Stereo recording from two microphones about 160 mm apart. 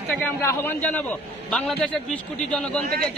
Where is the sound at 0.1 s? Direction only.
10° left (ahead or behind).